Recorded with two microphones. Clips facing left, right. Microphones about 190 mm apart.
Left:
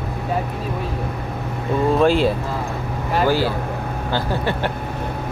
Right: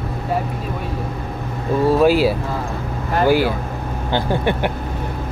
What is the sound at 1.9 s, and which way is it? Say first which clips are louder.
Speech: right 2 dB; 5° right (ahead or behind).